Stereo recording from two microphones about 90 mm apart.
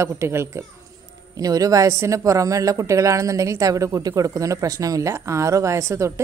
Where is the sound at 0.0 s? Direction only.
30° right (ahead or behind).